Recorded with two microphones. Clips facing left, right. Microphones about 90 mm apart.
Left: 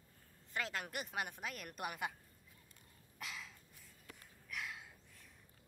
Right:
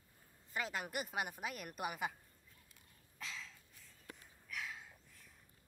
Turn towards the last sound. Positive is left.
turn(degrees=0)  # may be behind; listen again after turning